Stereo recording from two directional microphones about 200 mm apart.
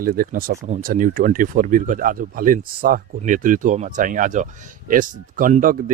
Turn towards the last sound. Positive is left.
turn(degrees=-40)  # may be behind; listen again after turning